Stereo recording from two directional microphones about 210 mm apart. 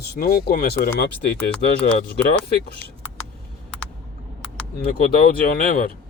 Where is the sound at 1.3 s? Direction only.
5° left (ahead or behind).